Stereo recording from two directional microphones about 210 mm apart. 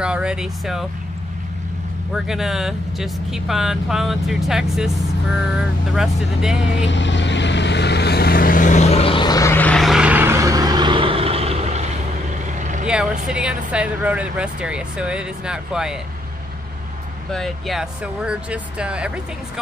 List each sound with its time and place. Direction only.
0.0 s speech: 5° right (ahead or behind)
2.1 s speech: centre (ahead or behind)
6.8 s vehicle: 60° left (ahead or behind); by 12.8 s 35° right (ahead or behind)
12.8 s speech: 5° right (ahead or behind)
17.3 s speech: centre (ahead or behind)